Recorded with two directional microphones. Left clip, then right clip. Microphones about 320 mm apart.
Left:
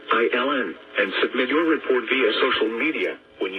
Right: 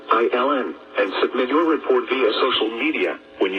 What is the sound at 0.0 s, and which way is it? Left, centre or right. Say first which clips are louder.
Speech: right 2 dB; right.